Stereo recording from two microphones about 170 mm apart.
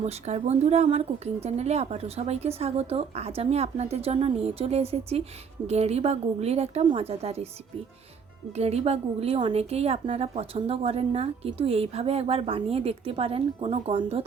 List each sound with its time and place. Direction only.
0.0 s a woman's voice: 40° right (ahead or behind)
8.5 s a woman's voice: 40° right (ahead or behind)